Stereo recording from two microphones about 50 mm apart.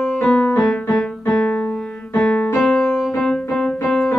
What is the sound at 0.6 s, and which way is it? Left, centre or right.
Music, centre.